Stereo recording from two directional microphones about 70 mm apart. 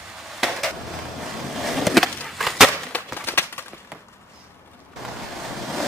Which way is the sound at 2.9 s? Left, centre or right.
Left.